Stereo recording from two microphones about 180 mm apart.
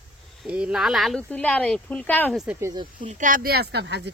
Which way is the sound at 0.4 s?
5° right (ahead or behind).